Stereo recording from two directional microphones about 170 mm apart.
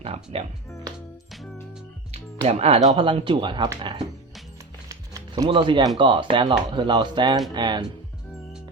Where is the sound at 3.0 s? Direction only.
30° right (ahead or behind).